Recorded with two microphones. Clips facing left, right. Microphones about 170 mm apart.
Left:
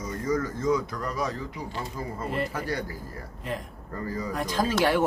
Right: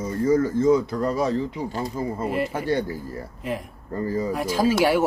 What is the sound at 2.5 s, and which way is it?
Speech, 25° right (ahead or behind).